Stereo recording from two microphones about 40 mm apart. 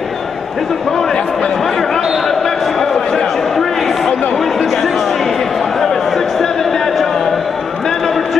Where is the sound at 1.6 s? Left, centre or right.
Centre.